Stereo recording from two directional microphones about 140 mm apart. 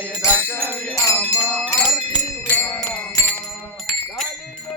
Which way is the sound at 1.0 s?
15° left (ahead or behind).